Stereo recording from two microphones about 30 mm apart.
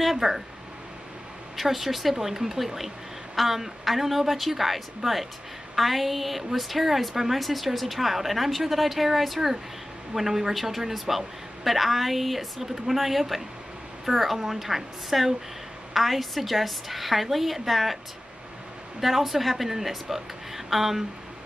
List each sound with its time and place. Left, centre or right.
0.2 s speech: right
1.6 s a woman's voice: centre
18.9 s a woman's voice: centre